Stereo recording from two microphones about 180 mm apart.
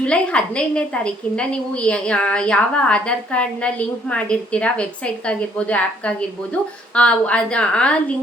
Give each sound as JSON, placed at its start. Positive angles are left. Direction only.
{"t": 0.0, "sound": "a woman's voice", "side_deg": 5}